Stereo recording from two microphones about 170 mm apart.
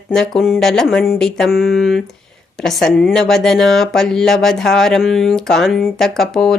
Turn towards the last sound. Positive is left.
turn(degrees=0)  # may be behind; listen again after turning